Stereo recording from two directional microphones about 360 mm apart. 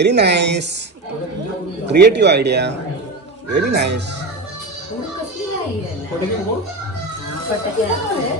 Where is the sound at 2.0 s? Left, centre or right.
Right.